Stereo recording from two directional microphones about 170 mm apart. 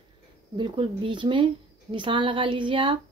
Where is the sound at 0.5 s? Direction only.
30° right (ahead or behind).